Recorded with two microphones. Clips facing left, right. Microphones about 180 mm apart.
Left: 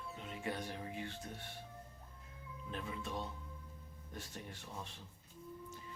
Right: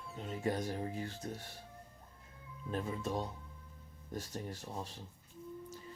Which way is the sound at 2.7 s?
40° right (ahead or behind).